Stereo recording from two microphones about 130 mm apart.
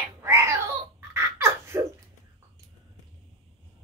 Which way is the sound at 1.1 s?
20° right (ahead or behind).